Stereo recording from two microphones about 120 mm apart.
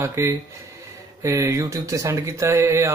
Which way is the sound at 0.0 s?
20° right (ahead or behind).